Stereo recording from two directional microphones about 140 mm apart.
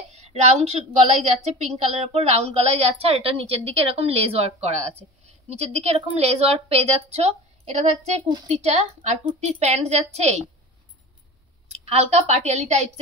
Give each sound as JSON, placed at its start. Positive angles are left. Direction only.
{"t": 0.1, "sound": "a sound", "side_deg": -50}
{"t": 1.2, "sound": "a woman's voice", "side_deg": -50}
{"t": 11.7, "sound": "a woman's voice", "side_deg": -50}